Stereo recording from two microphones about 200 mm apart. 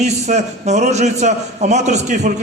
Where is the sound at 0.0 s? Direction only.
35° right (ahead or behind).